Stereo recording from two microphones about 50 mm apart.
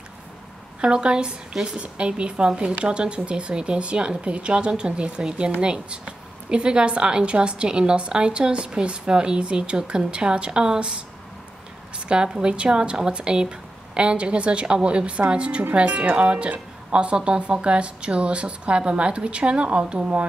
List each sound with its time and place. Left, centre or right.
0.7 s a woman's voice: centre
1.8 s a woman's voice: right
12.1 s a woman's voice: centre